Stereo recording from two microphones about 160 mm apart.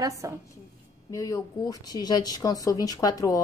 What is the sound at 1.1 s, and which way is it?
Speech, 20° left (ahead or behind).